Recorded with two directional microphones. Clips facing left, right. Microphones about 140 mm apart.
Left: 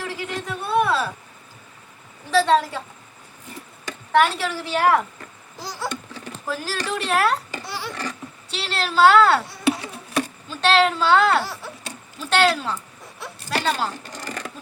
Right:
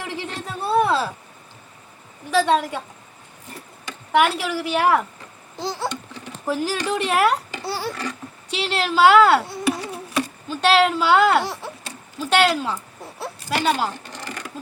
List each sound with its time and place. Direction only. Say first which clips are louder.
0.0 s a sound: left 1 dB; 20° right (ahead or behind)
2.3 s a woman's voice: left 1 dB; 15° right (ahead or behind)
4.1 s a woman's voice: even; 10° right (ahead or behind)
5.5 s babbling: right 4 dB; 25° right (ahead or behind)
6.4 s a woman's voice: right 5 dB; 15° right (ahead or behind)
7.6 s a sound: right 5 dB; 40° right (ahead or behind)
8.4 s a woman's voice: right 4 dB; 15° right (ahead or behind)
10.5 s a woman's voice: right 1 dB; 10° right (ahead or behind)
14.0 s sewing machine: left 1 dB; 40° left (ahead or behind)